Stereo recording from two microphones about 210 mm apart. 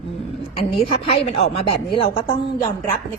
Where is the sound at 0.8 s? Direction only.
30° left (ahead or behind).